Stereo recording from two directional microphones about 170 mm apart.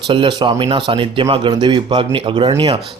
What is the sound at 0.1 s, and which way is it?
A man's voice, 30° right (ahead or behind).